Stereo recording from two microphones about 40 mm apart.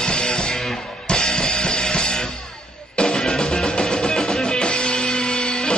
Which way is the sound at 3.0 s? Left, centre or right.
Centre.